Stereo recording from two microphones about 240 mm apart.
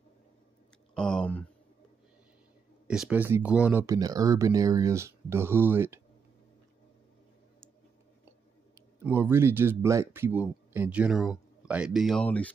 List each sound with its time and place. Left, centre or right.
0.9 s a sound: centre
2.9 s speech: centre
8.7 s speech: centre